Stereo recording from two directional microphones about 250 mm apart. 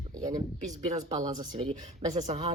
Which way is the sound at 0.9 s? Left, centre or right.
Right.